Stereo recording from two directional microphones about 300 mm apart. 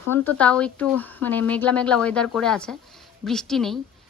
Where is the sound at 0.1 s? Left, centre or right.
Centre.